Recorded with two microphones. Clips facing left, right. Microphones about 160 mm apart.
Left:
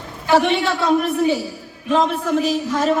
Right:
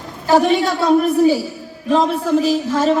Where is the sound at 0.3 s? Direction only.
40° right (ahead or behind).